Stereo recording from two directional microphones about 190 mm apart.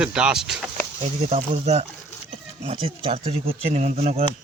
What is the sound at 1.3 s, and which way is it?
Speech, 35° right (ahead or behind).